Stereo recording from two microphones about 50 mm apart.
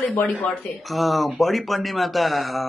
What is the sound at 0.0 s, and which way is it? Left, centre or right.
Speech, left.